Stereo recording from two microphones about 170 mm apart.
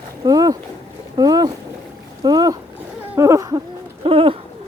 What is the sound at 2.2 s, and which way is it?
Boat, 20° right (ahead or behind).